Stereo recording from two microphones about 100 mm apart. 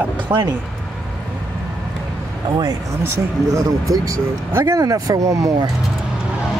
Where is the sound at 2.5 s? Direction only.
40° right (ahead or behind).